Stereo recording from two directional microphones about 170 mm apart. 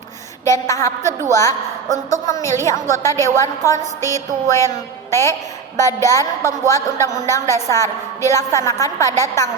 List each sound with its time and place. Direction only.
0.4 s a woman's voice: 15° left (ahead or behind)
1.9 s a woman's voice: 45° right (ahead or behind)
2.2 s a woman's voice: 15° left (ahead or behind)